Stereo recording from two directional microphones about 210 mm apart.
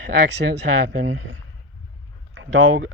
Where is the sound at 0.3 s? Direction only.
55° right (ahead or behind).